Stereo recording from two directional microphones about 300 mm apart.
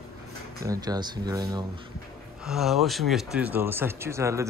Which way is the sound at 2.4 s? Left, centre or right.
Centre.